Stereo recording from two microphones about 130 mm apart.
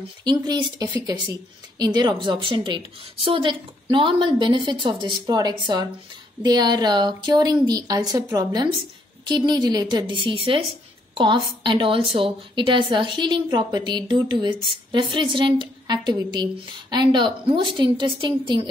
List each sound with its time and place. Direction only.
0.2 s a woman's voice: 30° right (ahead or behind)